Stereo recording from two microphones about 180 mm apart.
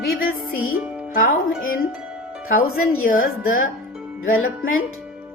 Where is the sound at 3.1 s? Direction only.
50° left (ahead or behind).